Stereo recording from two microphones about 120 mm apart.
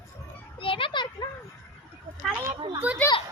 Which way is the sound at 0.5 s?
45° left (ahead or behind).